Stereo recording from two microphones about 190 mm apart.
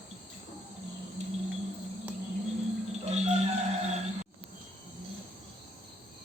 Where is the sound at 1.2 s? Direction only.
35° right (ahead or behind).